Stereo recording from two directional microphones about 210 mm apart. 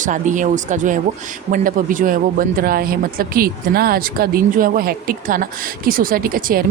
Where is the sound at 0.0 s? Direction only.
35° right (ahead or behind).